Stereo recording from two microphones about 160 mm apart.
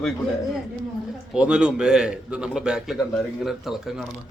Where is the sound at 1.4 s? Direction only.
5° right (ahead or behind).